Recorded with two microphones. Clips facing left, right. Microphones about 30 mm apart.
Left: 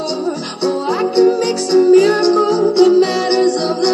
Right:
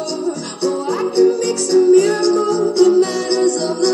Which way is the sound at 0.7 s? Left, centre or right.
Left.